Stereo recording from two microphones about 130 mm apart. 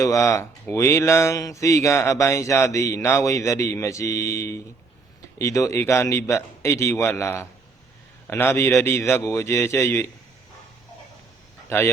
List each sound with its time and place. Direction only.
0.0 s speech: 25° left (ahead or behind)
11.7 s speech: 20° left (ahead or behind)